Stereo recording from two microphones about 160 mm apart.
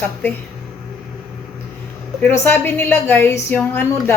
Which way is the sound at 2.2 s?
10° left (ahead or behind).